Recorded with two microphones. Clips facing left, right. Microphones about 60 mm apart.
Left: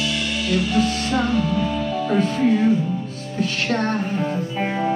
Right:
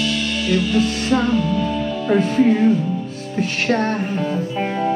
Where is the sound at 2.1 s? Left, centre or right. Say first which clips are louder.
Right 4 dB; right.